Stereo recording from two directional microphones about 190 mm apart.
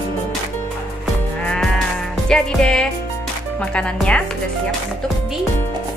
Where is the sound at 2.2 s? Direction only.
5° left (ahead or behind).